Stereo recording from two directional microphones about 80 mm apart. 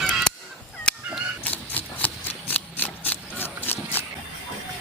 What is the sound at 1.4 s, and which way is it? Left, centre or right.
Vehicle, centre.